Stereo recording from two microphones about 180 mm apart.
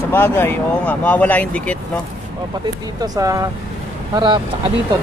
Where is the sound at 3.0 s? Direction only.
20° right (ahead or behind).